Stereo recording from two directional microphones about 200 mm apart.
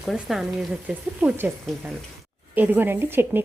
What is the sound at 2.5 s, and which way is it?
Speech, 10° right (ahead or behind).